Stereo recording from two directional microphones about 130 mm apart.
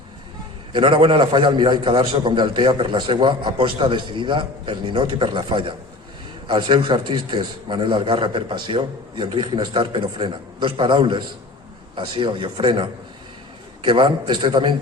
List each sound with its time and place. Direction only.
0.7 s a man's voice: 40° right (ahead or behind)